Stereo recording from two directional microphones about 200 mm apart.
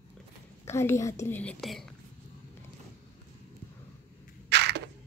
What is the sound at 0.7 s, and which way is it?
Speech, 15° left (ahead or behind).